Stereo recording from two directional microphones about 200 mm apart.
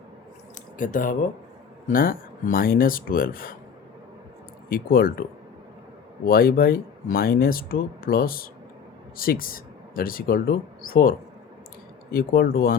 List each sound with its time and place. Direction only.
0.8 s speech: 40° left (ahead or behind)
4.7 s speech: 45° left (ahead or behind)
6.2 s speech: 45° left (ahead or behind)
12.1 s speech: 50° left (ahead or behind)